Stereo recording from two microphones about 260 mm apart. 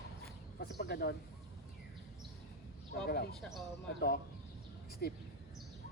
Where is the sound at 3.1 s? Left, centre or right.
Left.